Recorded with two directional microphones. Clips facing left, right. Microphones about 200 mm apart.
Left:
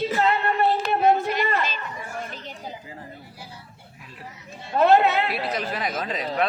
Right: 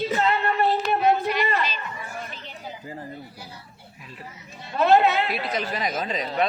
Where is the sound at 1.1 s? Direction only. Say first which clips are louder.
Even; 45° left (ahead or behind).